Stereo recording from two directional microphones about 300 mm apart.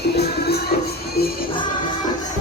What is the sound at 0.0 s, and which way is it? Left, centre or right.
Music, left.